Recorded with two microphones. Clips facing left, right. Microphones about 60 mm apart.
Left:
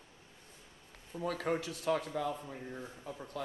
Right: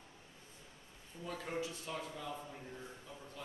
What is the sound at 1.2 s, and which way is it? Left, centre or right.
A man's voice, left.